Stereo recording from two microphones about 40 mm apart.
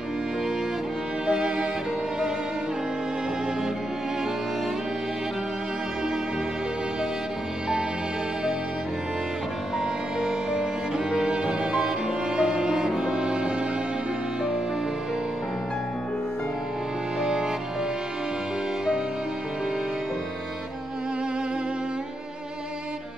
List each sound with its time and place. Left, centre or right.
1.2 s music: centre
10.2 s music: centre
17.2 s music: right